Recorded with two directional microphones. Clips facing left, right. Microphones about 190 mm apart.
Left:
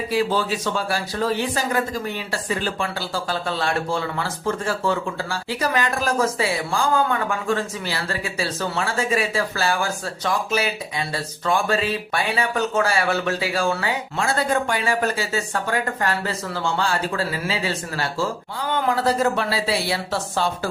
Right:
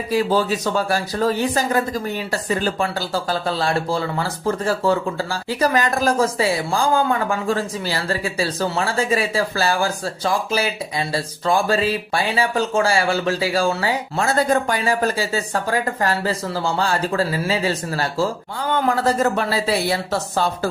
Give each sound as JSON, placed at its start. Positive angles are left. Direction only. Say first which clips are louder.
{"t": 0.1, "sound": "speech", "louder": "right 4 dB", "side_deg": -40}